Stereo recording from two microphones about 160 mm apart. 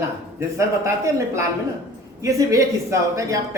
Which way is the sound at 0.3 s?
20° right (ahead or behind).